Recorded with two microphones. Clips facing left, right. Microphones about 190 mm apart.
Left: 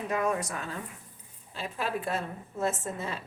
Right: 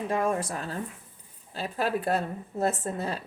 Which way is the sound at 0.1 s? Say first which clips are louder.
Right 1 dB; 30° right (ahead or behind).